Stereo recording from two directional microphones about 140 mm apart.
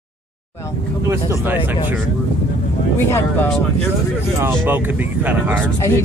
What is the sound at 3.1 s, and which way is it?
Speech, 15° left (ahead or behind).